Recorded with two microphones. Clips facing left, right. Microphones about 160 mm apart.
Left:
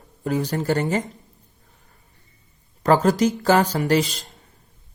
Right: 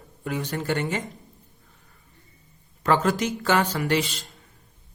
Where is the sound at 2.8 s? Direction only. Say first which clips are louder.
Left 5 dB; 40° left (ahead or behind).